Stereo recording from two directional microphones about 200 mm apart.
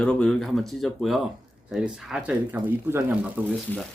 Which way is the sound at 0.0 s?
5° left (ahead or behind).